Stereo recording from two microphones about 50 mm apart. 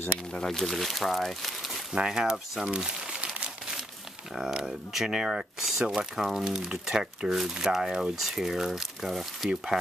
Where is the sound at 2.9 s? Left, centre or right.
Centre.